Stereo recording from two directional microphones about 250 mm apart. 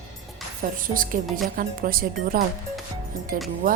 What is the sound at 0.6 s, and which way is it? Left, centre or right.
Speech, right.